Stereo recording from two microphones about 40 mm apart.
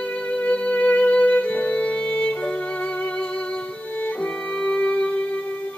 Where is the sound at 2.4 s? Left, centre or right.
Left.